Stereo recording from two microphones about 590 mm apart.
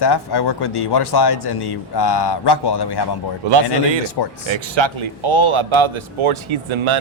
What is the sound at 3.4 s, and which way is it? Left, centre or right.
Speech, right.